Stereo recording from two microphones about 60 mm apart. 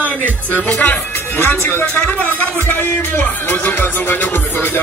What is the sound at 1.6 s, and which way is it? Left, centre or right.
Speech, left.